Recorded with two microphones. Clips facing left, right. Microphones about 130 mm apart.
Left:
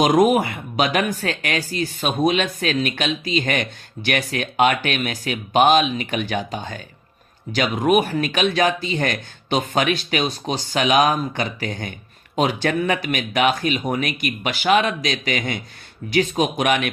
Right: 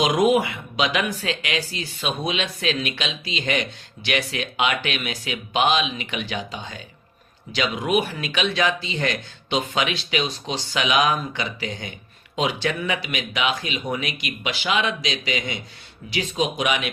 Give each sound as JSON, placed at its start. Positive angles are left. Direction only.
{"t": 0.0, "sound": "speech", "side_deg": 45}